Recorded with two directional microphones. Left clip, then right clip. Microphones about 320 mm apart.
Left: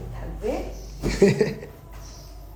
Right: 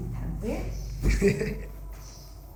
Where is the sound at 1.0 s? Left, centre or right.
Centre.